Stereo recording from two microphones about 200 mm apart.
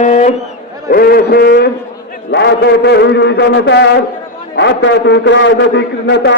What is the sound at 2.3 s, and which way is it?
A man's voice, 55° left (ahead or behind).